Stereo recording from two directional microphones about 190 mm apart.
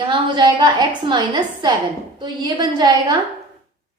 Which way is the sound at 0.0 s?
25° right (ahead or behind).